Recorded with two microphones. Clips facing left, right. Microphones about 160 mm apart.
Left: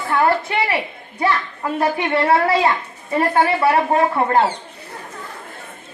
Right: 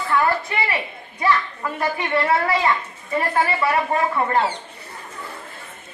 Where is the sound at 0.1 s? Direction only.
30° left (ahead or behind).